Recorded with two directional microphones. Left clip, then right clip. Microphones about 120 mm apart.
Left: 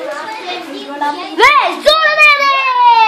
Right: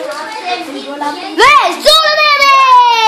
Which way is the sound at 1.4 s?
30° right (ahead or behind).